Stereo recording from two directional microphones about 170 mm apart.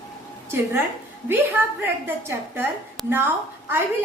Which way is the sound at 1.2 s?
15° right (ahead or behind).